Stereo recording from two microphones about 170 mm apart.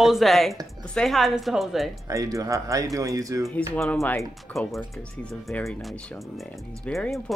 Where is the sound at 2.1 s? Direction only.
20° right (ahead or behind).